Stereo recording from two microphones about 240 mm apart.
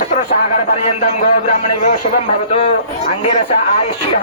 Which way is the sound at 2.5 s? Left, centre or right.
Left.